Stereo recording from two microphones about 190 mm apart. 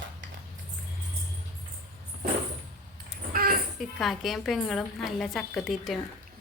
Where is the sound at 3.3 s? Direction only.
50° right (ahead or behind).